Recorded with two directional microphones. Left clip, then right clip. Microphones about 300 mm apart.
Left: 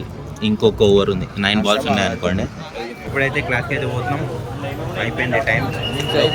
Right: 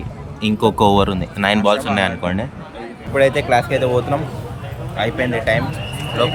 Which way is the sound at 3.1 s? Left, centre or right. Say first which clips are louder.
Right 5 dB; centre.